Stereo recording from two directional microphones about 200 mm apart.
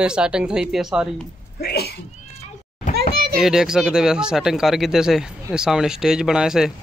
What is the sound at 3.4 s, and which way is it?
Speech, 5° right (ahead or behind).